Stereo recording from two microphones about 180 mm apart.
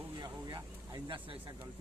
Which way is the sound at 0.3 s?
20° right (ahead or behind).